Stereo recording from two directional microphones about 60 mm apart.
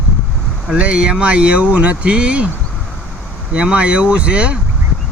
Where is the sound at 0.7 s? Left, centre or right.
Centre.